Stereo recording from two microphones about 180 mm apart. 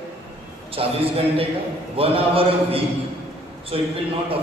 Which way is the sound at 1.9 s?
30° right (ahead or behind).